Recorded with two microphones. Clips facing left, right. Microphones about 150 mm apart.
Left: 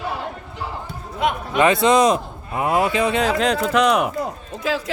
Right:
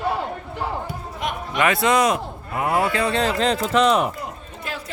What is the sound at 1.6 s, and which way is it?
Speech, 25° left (ahead or behind).